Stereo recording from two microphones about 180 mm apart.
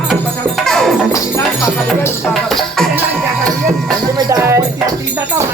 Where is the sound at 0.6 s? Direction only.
Centre (ahead or behind).